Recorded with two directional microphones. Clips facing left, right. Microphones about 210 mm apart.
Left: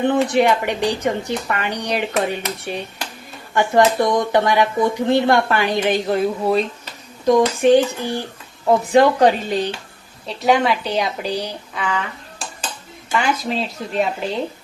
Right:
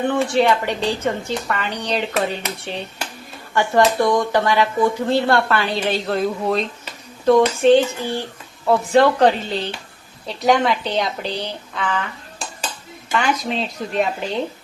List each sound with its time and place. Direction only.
0.1 s speech: 15° left (ahead or behind)
10.2 s speech: 5° left (ahead or behind)
13.1 s speech: 5° left (ahead or behind)